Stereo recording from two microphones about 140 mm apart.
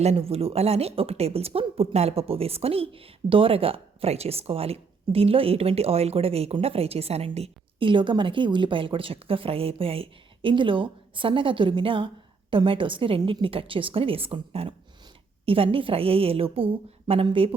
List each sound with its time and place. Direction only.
0.0 s a woman's voice: 50° right (ahead or behind)